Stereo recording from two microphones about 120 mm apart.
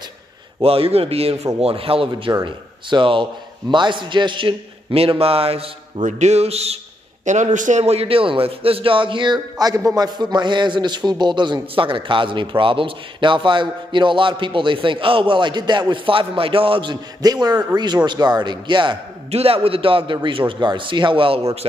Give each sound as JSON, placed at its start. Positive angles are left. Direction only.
{"t": 0.6, "sound": "a man's voice", "side_deg": -55}
{"t": 6.0, "sound": "a sound", "side_deg": -75}
{"t": 7.2, "sound": "a man's voice", "side_deg": -90}
{"t": 19.3, "sound": "a man's voice", "side_deg": -55}